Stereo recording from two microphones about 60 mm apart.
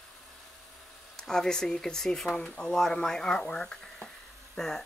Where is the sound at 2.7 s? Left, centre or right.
Centre.